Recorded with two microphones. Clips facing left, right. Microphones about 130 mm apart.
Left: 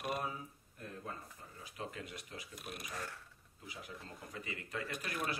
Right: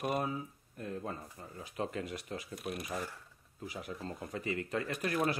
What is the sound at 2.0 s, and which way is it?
Speech, 90° right.